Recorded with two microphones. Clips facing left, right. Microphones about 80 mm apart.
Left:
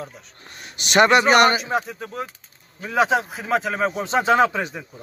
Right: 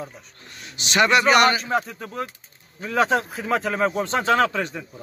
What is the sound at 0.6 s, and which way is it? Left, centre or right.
A man's voice, left.